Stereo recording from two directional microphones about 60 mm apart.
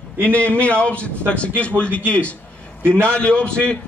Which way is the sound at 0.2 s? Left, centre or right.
Left.